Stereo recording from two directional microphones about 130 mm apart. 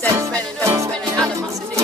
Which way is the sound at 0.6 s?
25° right (ahead or behind).